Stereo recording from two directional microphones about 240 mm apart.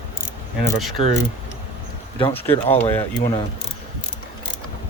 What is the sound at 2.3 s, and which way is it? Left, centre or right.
Speech, centre.